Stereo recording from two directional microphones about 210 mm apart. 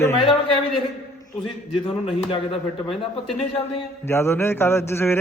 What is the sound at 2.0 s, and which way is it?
A man's voice, 25° left (ahead or behind).